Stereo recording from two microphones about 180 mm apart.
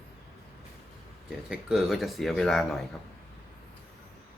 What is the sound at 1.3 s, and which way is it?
Speech, 5° right (ahead or behind).